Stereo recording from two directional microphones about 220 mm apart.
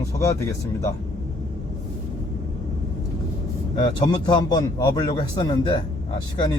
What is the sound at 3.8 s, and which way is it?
A man's voice, 20° left (ahead or behind).